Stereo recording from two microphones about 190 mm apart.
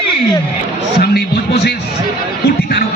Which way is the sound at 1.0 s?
55° left (ahead or behind).